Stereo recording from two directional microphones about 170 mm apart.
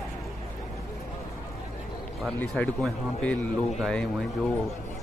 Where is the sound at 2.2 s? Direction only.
5° left (ahead or behind).